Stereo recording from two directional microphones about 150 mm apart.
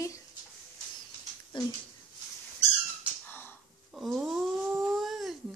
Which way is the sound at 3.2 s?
15° left (ahead or behind).